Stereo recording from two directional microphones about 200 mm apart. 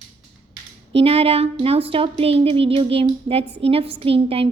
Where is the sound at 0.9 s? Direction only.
30° right (ahead or behind).